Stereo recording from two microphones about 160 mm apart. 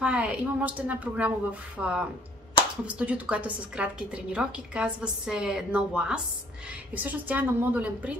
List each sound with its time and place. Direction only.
0.0 s a woman's voice: 10° right (ahead or behind)